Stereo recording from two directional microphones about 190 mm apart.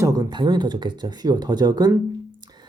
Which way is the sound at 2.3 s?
20° right (ahead or behind).